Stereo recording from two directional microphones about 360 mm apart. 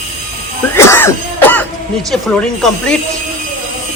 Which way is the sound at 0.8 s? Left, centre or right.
Centre.